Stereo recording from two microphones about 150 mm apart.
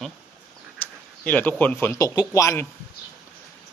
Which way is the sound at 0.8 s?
15° left (ahead or behind).